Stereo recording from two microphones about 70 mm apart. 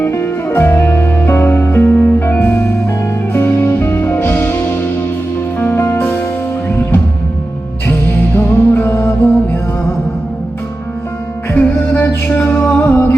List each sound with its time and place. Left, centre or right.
0.0 s music: left
11.5 s music: left